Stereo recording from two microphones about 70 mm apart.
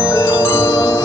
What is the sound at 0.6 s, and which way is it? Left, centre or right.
Wind chime, left.